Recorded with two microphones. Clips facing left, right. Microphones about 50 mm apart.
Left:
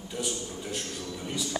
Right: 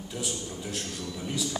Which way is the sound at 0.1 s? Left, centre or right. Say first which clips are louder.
Left 2 dB; centre.